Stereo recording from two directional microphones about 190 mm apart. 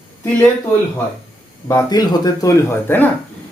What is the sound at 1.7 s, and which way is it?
Speech, 20° left (ahead or behind).